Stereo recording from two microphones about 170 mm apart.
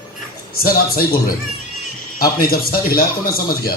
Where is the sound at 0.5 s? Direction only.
60° left (ahead or behind).